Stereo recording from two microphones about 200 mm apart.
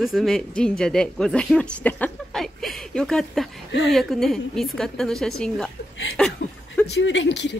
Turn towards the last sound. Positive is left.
turn(degrees=60)  # may be behind; listen again after turning